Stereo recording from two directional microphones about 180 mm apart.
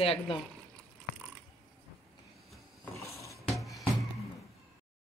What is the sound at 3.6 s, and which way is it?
Music, centre (ahead or behind).